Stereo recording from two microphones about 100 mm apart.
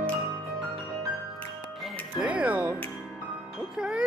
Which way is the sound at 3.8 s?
10° right (ahead or behind).